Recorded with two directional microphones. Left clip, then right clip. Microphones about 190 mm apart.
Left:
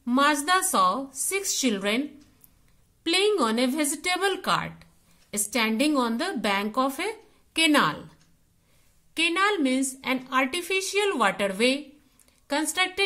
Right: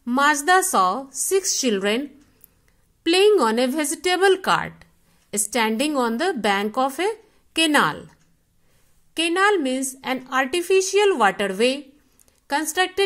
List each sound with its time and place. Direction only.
0.0 s a sound: 25° right (ahead or behind)
0.5 s a woman's voice: 25° right (ahead or behind)
3.0 s a woman's voice: 30° right (ahead or behind)